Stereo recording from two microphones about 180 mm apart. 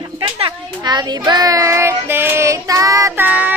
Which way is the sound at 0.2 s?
30° right (ahead or behind).